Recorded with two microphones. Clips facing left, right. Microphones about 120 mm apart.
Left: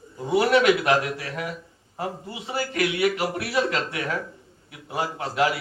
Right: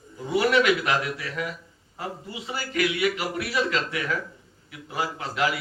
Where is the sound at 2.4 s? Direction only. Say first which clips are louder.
Left 2 dB; 40° left (ahead or behind).